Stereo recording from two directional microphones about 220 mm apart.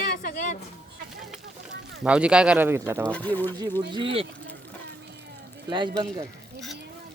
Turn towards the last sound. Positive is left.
turn(degrees=-20)  # may be behind; listen again after turning